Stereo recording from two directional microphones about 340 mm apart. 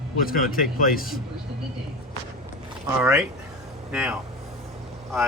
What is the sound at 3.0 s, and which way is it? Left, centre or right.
Speech, centre.